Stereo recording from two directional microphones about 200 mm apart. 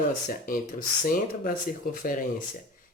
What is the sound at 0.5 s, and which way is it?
Speech, 45° left (ahead or behind).